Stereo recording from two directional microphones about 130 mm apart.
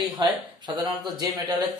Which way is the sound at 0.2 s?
35° right (ahead or behind).